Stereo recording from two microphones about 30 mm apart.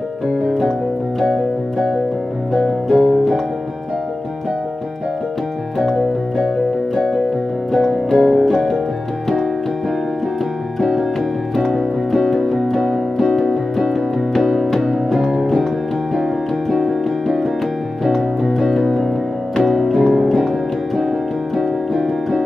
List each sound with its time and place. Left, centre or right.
1.2 s music: centre
2.9 s music: centre
5.8 s piano: centre
7.7 s music: centre
11.6 s music: centre
12.4 s piano: centre
12.8 s music: centre
14.4 s music: centre
18.0 s music: centre
21.5 s music: centre